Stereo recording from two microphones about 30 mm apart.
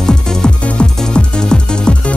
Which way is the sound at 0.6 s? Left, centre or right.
Left.